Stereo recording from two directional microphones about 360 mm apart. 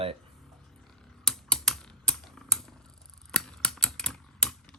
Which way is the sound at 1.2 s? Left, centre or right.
Centre.